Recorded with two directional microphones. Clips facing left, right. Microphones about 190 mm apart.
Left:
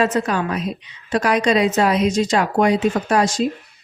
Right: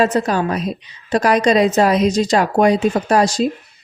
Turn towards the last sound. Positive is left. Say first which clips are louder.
# right 3 dB
turn(degrees=-35)  # may be behind; listen again after turning